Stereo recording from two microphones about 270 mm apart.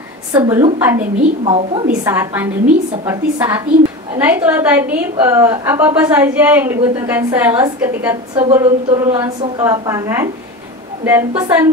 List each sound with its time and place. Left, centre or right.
0.3 s a woman's voice: centre
1.4 s a woman's voice: centre
2.0 s a woman's voice: centre